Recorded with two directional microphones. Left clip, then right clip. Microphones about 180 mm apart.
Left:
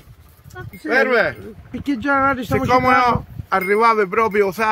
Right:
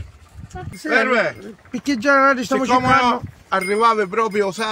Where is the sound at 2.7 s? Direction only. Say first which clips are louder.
Left 1 dB; 55° left (ahead or behind).